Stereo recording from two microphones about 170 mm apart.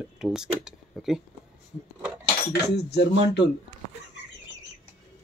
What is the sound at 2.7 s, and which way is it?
Cutlery, 75° left (ahead or behind).